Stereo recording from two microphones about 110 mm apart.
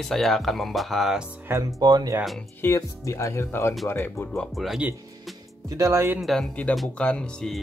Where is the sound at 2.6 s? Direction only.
30° left (ahead or behind).